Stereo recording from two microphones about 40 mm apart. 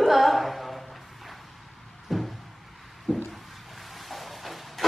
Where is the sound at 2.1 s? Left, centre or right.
Centre.